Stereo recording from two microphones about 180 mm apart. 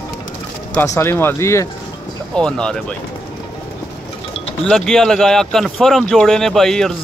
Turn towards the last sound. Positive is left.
turn(degrees=0)  # may be behind; listen again after turning